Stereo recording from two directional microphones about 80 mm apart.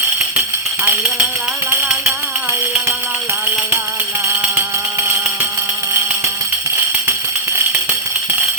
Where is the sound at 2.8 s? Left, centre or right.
Right.